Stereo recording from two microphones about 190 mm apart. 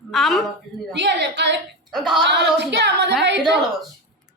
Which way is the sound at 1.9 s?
Centre (ahead or behind).